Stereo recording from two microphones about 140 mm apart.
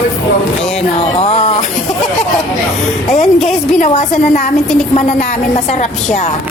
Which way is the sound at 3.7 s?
60° left (ahead or behind).